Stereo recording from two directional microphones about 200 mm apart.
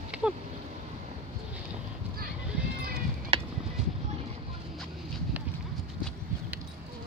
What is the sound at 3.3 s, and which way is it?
Music, 30° right (ahead or behind).